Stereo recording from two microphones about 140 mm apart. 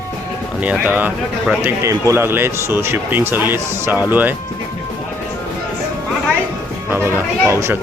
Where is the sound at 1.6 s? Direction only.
20° right (ahead or behind).